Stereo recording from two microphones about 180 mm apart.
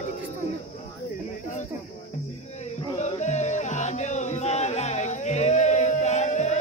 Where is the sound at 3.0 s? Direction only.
40° left (ahead or behind).